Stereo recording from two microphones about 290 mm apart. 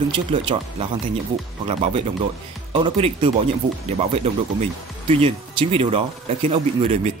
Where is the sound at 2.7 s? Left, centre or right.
Centre.